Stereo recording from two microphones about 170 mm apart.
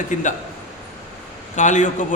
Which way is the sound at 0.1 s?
50° left (ahead or behind).